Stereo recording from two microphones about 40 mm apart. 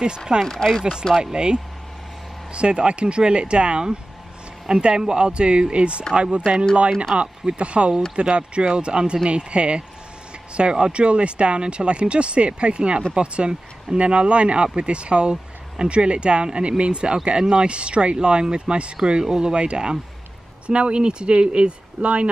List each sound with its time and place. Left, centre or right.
0.5 s speech: centre
1.2 s speech: centre